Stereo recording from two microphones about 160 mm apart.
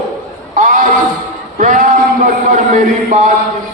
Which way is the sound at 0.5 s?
55° right (ahead or behind).